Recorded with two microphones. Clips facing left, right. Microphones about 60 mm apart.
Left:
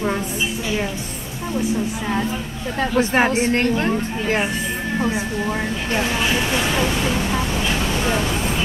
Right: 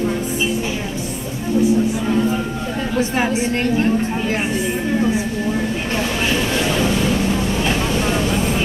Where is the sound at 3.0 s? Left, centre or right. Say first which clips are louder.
Left 2 dB; left.